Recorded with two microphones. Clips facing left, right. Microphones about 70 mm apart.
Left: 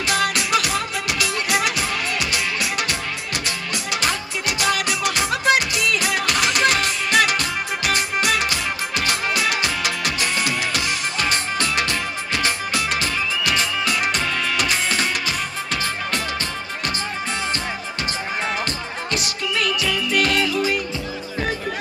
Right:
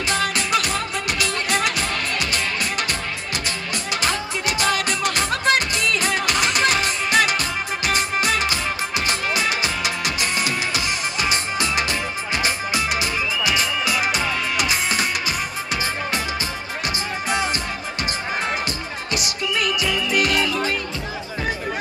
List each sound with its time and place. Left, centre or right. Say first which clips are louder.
0.0 s music: left 1 dB; centre
18.7 s music: left 1 dB; centre